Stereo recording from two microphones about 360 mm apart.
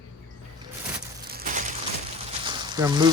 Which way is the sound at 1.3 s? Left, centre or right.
Right.